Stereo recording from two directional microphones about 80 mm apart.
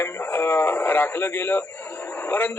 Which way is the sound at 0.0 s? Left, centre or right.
Left.